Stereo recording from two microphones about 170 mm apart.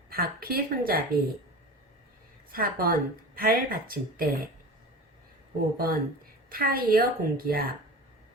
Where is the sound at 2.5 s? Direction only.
60° right (ahead or behind).